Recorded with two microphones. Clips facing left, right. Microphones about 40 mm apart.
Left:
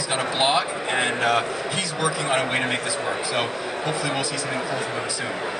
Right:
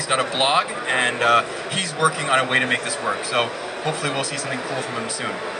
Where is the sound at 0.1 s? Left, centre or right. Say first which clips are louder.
Right 2 dB; right.